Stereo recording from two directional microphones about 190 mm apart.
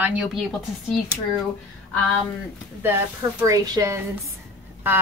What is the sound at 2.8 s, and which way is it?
A woman's voice, 10° right (ahead or behind).